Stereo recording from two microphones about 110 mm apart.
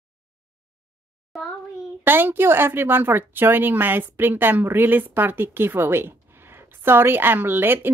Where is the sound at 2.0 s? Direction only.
20° right (ahead or behind).